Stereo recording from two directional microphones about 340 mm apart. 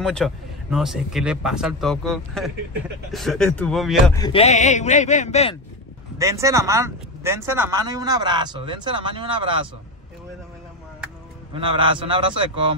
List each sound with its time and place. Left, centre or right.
0.0 s speech: centre
4.2 s a man's voice: centre
6.1 s speech: centre
11.5 s speech: centre